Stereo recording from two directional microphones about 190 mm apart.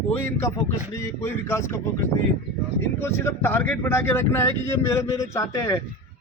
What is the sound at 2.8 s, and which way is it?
Speech, 10° left (ahead or behind).